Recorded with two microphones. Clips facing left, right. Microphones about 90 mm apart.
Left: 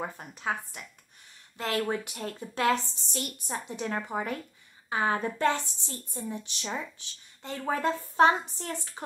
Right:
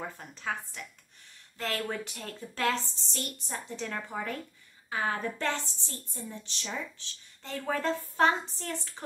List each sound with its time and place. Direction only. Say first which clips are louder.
0.0 s a woman's voice: left 3 dB; 15° left (ahead or behind)
5.4 s a woman's voice: left 6 dB; 15° left (ahead or behind)